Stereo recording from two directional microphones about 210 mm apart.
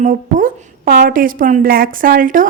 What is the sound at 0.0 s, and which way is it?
A woman's voice, 40° right (ahead or behind).